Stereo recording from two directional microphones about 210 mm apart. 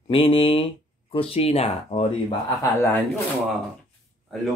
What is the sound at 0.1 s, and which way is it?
Speech, 25° left (ahead or behind).